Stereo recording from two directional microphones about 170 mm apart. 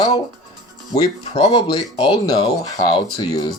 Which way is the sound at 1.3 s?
30° left (ahead or behind).